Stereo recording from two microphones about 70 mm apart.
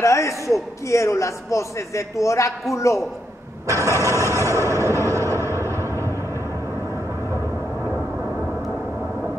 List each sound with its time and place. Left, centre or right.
0.0 s a man's voice: left
3.6 s engine starting: right
3.9 s a man's voice: left
4.2 s a sound: right